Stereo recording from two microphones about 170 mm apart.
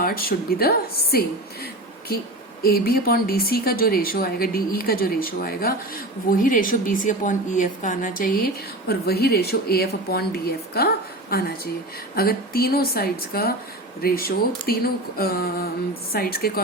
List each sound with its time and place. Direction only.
0.0 s speech: 60° left (ahead or behind)
2.6 s a woman's voice: 60° left (ahead or behind)
8.9 s speech: 65° left (ahead or behind)